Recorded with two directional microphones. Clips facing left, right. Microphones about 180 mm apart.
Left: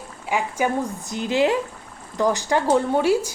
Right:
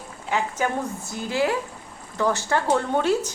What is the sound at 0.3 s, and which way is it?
Speech, 10° left (ahead or behind).